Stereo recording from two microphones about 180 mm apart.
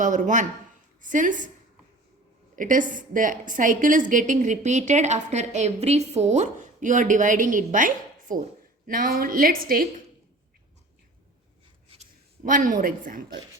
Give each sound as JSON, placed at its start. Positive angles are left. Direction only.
{"t": 0.0, "sound": "a woman's voice", "side_deg": -45}
{"t": 2.6, "sound": "a woman's voice", "side_deg": -45}
{"t": 12.5, "sound": "a woman's voice", "side_deg": -45}